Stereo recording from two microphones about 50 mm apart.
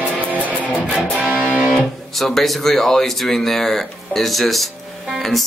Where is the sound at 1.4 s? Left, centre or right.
Right.